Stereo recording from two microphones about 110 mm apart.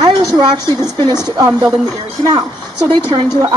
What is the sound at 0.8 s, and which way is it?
Speech, 25° left (ahead or behind).